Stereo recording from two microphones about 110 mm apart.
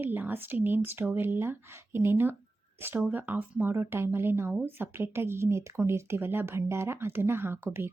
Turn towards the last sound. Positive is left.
turn(degrees=-20)  # may be behind; listen again after turning